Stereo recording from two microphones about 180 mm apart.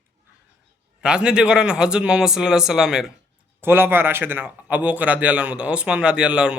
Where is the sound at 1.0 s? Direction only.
5° right (ahead or behind).